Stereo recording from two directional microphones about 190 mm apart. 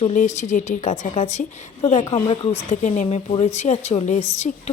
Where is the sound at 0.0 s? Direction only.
40° left (ahead or behind).